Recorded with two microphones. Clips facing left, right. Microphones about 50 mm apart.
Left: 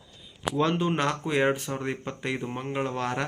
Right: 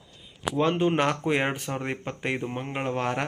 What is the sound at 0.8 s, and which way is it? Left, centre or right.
Speech, right.